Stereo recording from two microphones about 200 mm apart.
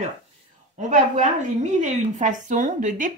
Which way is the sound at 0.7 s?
35° right (ahead or behind).